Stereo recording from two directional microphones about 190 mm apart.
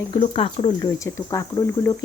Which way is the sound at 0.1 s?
30° left (ahead or behind).